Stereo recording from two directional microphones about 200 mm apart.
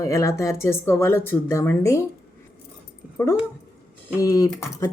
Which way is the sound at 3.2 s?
15° left (ahead or behind).